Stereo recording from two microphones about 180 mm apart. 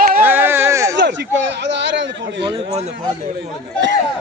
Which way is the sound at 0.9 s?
75° right (ahead or behind).